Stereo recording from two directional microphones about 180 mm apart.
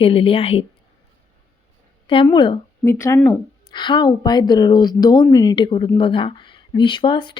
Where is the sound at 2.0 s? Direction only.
30° left (ahead or behind).